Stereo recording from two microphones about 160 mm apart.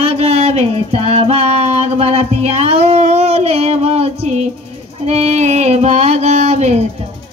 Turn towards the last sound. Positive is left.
turn(degrees=-45)  # may be behind; listen again after turning